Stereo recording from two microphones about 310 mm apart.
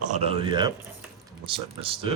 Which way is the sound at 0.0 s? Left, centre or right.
Right.